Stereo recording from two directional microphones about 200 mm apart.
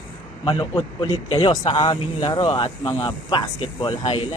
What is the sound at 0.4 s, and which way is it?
Speech, 25° left (ahead or behind).